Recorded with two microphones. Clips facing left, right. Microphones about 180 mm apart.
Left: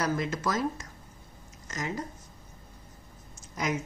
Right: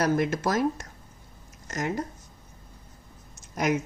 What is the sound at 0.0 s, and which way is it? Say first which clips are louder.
Speech: right 5 dB; 65° right (ahead or behind).